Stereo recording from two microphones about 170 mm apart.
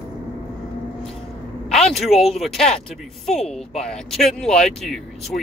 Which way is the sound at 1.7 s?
Centre (ahead or behind).